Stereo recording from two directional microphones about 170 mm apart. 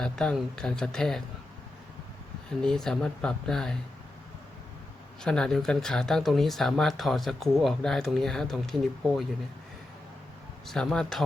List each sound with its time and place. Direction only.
0.0 s speech: 5° left (ahead or behind)
2.6 s speech: 5° left (ahead or behind)
5.2 s speech: 5° left (ahead or behind)
10.7 s speech: centre (ahead or behind)